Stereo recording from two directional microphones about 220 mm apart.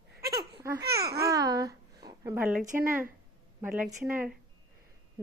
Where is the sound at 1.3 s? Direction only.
15° right (ahead or behind).